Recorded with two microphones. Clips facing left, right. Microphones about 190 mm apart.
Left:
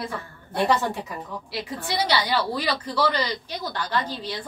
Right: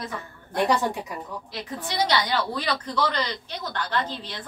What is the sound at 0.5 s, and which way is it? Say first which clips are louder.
Speech: even; 15° right (ahead or behind).